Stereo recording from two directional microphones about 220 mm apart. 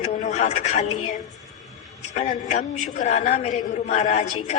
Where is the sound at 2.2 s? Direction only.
35° left (ahead or behind).